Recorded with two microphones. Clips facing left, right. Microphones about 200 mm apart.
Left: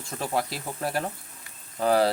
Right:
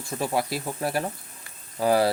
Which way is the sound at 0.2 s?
10° right (ahead or behind).